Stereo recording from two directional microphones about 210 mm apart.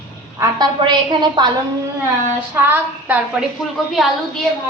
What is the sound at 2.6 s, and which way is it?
A woman's voice, 10° right (ahead or behind).